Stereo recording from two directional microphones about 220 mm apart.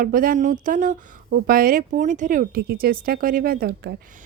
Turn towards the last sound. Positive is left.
turn(degrees=-45)  # may be behind; listen again after turning